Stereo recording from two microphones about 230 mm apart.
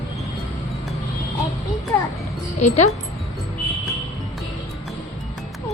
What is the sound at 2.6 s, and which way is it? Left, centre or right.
Speech, left.